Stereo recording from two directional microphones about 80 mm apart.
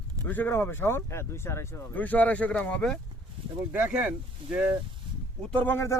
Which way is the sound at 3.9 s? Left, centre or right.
Centre.